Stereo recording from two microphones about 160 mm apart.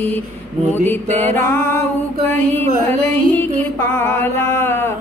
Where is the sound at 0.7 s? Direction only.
10° left (ahead or behind).